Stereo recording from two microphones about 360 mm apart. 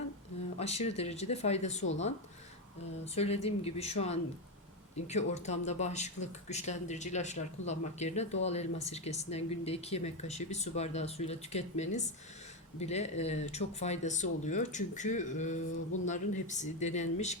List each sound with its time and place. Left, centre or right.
0.6 s speech: centre